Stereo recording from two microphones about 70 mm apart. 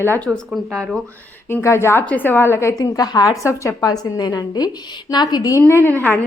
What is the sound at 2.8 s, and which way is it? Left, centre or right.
Speech, left.